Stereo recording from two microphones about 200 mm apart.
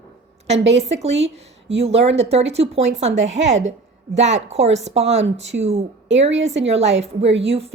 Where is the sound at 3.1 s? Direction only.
65° right (ahead or behind).